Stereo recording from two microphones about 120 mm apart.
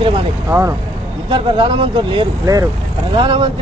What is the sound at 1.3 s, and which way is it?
Speech, 40° right (ahead or behind).